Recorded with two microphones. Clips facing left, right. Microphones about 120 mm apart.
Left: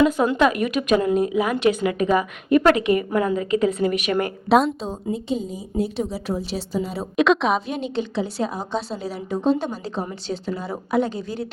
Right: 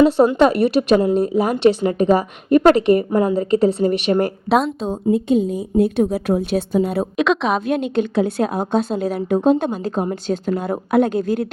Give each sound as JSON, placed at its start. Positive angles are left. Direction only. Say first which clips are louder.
{"t": 0.0, "sound": "speech", "louder": "right 5 dB", "side_deg": -35}
{"t": 4.4, "sound": "speech", "louder": "left 4 dB", "side_deg": 0}
{"t": 4.9, "sound": "a woman's voice", "louder": "right 8 dB", "side_deg": -55}
{"t": 7.2, "sound": "speech", "louder": "left 1 dB", "side_deg": 0}
{"t": 7.7, "sound": "a woman's voice", "louder": "right 7 dB", "side_deg": -55}